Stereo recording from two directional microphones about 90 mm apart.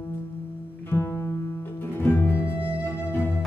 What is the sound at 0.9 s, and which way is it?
Music, 30° left (ahead or behind).